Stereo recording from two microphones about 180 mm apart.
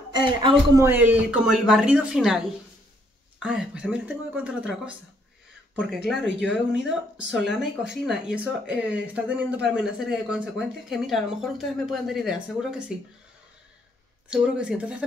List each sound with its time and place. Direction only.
0.1 s a man's voice: 25° right (ahead or behind)
0.8 s speech: 10° right (ahead or behind)
6.4 s speech: centre (ahead or behind)
14.3 s speech: 5° right (ahead or behind)